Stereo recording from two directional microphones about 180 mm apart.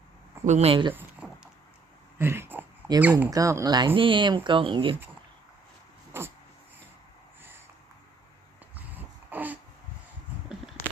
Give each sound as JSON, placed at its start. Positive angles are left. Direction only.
{"t": 0.4, "sound": "speech", "side_deg": -35}
{"t": 1.2, "sound": "a sound", "side_deg": -5}
{"t": 3.0, "sound": "speech", "side_deg": -10}
{"t": 3.2, "sound": "speech", "side_deg": -20}
{"t": 6.1, "sound": "a sound", "side_deg": -15}
{"t": 8.7, "sound": "dog", "side_deg": -10}